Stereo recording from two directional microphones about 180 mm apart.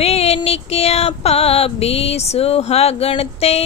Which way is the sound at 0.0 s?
35° left (ahead or behind).